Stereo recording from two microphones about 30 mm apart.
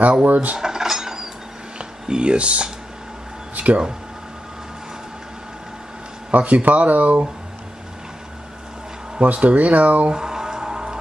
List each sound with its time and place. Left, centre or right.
0.2 s cutlery: right
0.6 s cutlery: centre
1.8 s speech: right
3.5 s speech: right
6.3 s speech: right
9.2 s speech: right
10.1 s music: right